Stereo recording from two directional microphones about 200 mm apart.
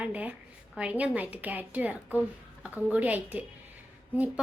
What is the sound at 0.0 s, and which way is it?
A woman's voice, 5° right (ahead or behind).